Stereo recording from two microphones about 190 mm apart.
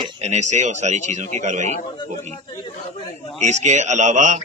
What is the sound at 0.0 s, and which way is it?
Speech, 35° right (ahead or behind).